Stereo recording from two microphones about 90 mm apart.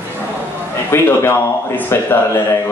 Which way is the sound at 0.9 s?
30° left (ahead or behind).